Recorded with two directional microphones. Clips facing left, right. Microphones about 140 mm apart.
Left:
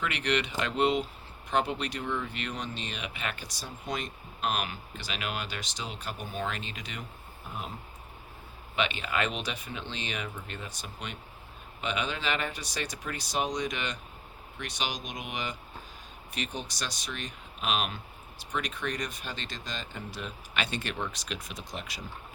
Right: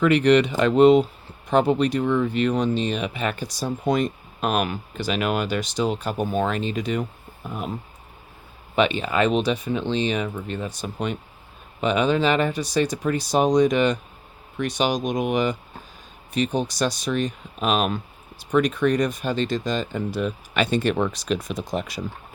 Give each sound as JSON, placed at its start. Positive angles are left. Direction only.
{"t": 0.0, "sound": "speech", "side_deg": -40}
{"t": 3.8, "sound": "speech", "side_deg": -50}
{"t": 8.7, "sound": "speech", "side_deg": -35}
{"t": 16.6, "sound": "speech", "side_deg": -40}